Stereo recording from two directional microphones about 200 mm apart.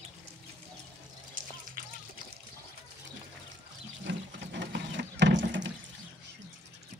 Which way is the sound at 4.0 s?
60° right (ahead or behind).